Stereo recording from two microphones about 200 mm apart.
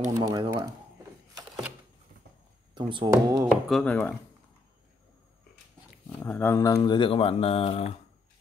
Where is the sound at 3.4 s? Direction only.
Centre (ahead or behind).